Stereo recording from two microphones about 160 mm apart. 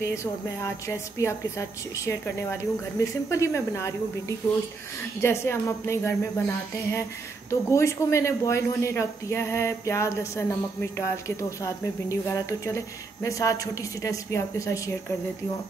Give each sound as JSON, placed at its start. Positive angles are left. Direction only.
{"t": 0.0, "sound": "a woman's voice", "side_deg": 20}
{"t": 5.2, "sound": "a woman's voice", "side_deg": 15}